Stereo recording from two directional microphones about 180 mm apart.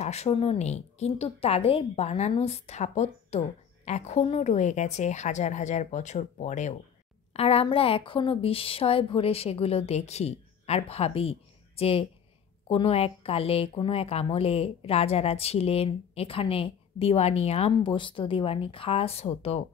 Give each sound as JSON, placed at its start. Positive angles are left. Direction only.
{"t": 0.0, "sound": "speech", "side_deg": 35}